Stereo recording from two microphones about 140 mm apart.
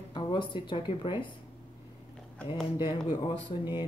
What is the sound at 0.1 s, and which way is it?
Speech, 30° left (ahead or behind).